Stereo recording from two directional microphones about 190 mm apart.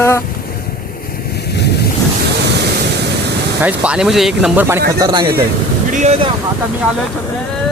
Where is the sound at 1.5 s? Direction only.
60° left (ahead or behind).